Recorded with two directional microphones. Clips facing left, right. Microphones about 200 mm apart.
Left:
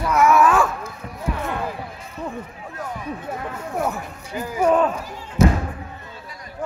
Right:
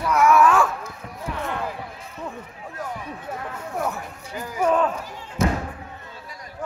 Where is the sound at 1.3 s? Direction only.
5° left (ahead or behind).